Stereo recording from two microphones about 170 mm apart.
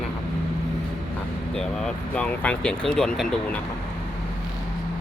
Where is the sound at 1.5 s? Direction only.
5° left (ahead or behind).